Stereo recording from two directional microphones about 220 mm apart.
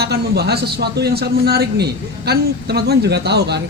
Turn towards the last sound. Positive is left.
turn(degrees=-50)  # may be behind; listen again after turning